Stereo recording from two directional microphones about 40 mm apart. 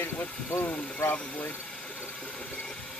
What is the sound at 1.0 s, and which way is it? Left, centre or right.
Speech, left.